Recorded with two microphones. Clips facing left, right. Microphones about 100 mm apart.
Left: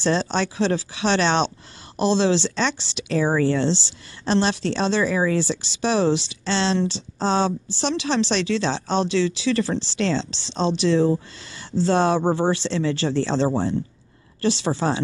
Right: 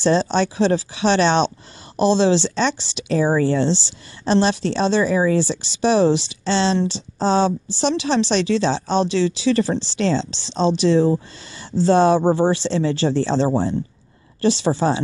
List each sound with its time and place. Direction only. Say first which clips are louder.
0.0 s speech: right 4 dB; 5° right (ahead or behind)